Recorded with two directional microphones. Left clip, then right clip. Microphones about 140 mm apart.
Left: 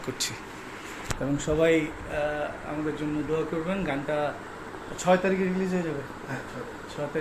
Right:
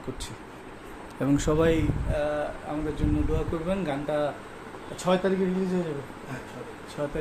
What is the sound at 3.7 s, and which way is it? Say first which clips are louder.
Speech: right 1 dB; 35° right (ahead or behind).